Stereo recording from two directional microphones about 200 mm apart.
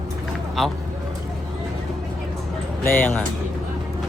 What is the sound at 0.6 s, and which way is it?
Speech, centre (ahead or behind).